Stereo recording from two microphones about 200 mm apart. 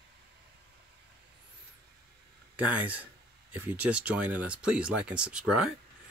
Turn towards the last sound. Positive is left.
turn(degrees=-5)  # may be behind; listen again after turning